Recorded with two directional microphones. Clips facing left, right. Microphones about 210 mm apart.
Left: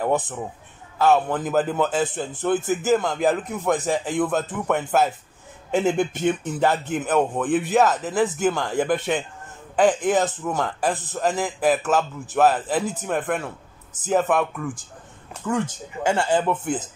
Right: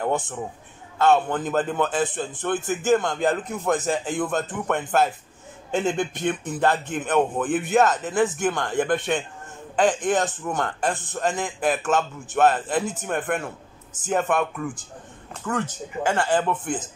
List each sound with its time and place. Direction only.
1.0 s a man's voice: centre (ahead or behind)